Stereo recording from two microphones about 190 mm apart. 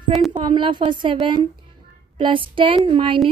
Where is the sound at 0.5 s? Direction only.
25° right (ahead or behind).